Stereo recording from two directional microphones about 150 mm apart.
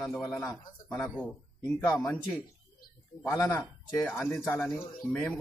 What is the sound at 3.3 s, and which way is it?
Speech, 25° left (ahead or behind).